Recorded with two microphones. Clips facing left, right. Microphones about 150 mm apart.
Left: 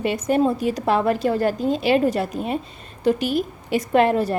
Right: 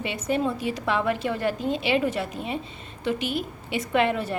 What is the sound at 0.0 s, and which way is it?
A woman's voice, 45° left (ahead or behind).